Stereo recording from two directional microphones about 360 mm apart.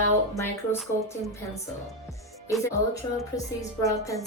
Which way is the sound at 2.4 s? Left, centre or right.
Centre.